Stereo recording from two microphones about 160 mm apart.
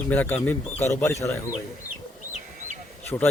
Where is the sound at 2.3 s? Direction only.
50° right (ahead or behind).